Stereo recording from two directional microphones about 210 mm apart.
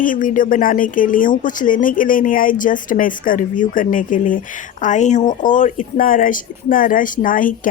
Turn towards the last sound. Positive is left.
turn(degrees=40)  # may be behind; listen again after turning